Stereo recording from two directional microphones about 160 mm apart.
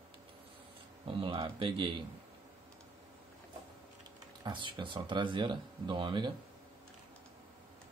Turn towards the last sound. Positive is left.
turn(degrees=-30)  # may be behind; listen again after turning